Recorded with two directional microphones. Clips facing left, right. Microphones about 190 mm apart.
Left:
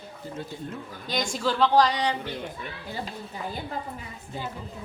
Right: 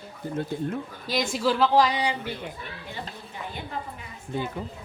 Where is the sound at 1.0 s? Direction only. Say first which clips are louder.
Right 2 dB; 5° right (ahead or behind).